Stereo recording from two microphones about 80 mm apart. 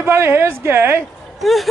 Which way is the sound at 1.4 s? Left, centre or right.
Centre.